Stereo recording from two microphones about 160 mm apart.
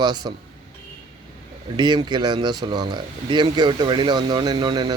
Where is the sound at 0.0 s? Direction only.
25° right (ahead or behind).